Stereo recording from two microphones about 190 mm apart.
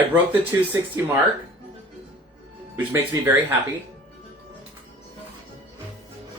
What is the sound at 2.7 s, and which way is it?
Speech, 10° right (ahead or behind).